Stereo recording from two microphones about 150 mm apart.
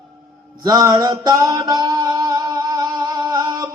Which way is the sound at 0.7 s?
25° right (ahead or behind).